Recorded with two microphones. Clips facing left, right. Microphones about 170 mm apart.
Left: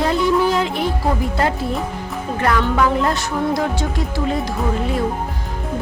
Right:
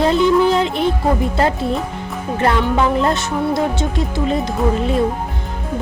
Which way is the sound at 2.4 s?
25° right (ahead or behind).